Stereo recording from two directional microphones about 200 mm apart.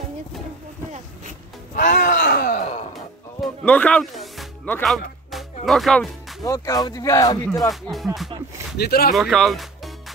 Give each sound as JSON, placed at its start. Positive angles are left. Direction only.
{"t": 1.8, "sound": "groan", "side_deg": 40}
{"t": 3.6, "sound": "music", "side_deg": 5}
{"t": 4.7, "sound": "speech", "side_deg": 0}
{"t": 5.3, "sound": "music", "side_deg": 0}
{"t": 6.4, "sound": "speech", "side_deg": 15}
{"t": 7.7, "sound": "speech", "side_deg": 0}
{"t": 8.7, "sound": "speech", "side_deg": 50}
{"t": 9.1, "sound": "speech", "side_deg": 0}